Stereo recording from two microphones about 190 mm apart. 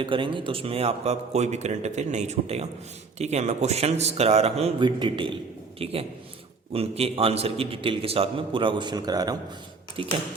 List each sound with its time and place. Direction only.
0.0 s a man's voice: 25° right (ahead or behind)